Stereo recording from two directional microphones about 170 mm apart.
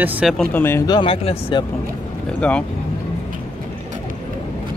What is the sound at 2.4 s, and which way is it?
Speech, 5° left (ahead or behind).